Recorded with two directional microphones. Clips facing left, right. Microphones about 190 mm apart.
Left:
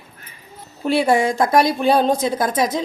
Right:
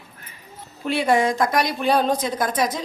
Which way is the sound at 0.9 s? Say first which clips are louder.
Left 3 dB; 35° left (ahead or behind).